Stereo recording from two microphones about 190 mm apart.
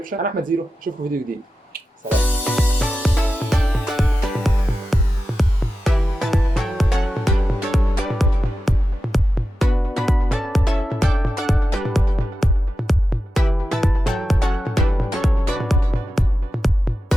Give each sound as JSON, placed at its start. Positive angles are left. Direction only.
{"t": 0.0, "sound": "speech", "side_deg": -45}
{"t": 2.2, "sound": "music", "side_deg": 5}